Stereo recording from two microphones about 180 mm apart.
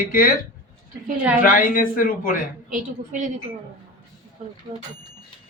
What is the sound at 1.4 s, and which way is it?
Speech, 50° left (ahead or behind).